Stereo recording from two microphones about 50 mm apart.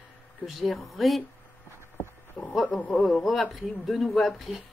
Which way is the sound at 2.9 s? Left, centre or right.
Centre.